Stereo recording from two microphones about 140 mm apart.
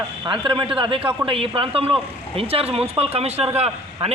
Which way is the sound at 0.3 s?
35° right (ahead or behind).